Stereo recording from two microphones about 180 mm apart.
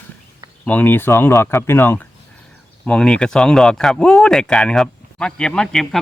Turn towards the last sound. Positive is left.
turn(degrees=0)  # may be behind; listen again after turning